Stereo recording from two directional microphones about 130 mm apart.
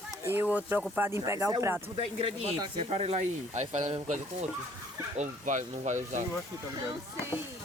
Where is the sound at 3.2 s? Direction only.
60° right (ahead or behind).